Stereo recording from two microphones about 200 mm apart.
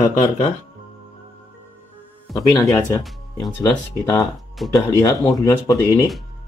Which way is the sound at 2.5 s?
15° left (ahead or behind).